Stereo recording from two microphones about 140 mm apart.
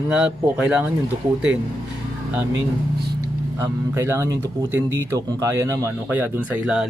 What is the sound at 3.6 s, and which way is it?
Speech, 20° right (ahead or behind).